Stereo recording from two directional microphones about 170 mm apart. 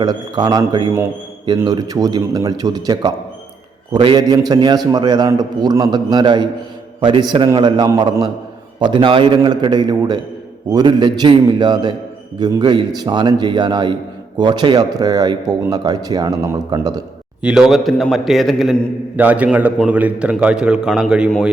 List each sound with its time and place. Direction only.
0.0 s speech: 20° right (ahead or behind)
17.4 s a man's voice: 5° right (ahead or behind)